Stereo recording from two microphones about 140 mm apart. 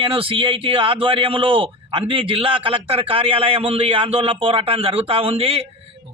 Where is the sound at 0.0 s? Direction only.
40° right (ahead or behind).